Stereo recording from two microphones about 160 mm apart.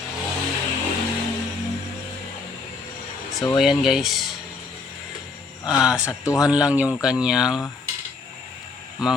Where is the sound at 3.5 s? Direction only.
Centre (ahead or behind).